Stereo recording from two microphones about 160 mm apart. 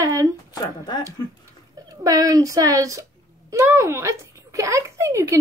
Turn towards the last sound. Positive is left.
turn(degrees=-20)  # may be behind; listen again after turning